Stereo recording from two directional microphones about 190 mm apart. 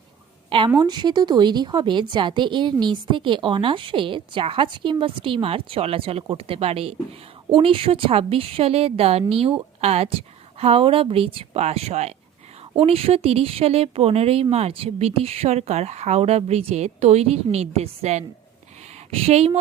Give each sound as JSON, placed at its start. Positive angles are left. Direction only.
{"t": 0.7, "sound": "a woman's voice", "side_deg": -20}